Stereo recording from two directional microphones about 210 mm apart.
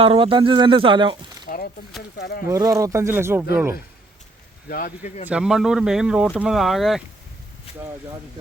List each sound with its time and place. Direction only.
0.0 s speech: 25° right (ahead or behind)
1.5 s a sound: 40° left (ahead or behind)
2.1 s speech: 50° left (ahead or behind)
2.5 s speech: 15° right (ahead or behind)
4.7 s speech: 40° left (ahead or behind)
5.3 s speech: 5° right (ahead or behind)